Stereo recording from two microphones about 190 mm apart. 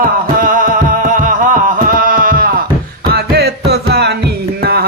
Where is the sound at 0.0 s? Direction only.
45° right (ahead or behind).